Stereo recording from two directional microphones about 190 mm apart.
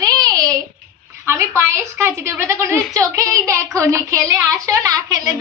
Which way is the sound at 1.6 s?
15° right (ahead or behind).